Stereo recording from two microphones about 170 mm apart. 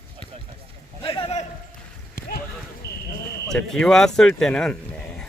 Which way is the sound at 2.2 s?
60° left (ahead or behind).